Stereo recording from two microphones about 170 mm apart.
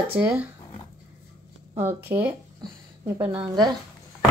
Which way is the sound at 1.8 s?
10° right (ahead or behind).